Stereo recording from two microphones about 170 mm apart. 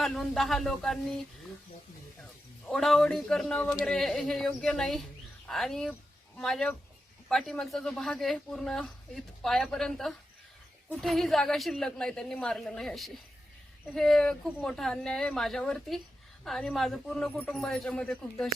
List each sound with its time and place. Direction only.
0.0 s speech: centre (ahead or behind)
2.6 s speech: centre (ahead or behind)